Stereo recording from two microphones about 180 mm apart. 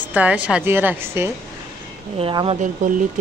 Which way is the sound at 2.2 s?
30° right (ahead or behind).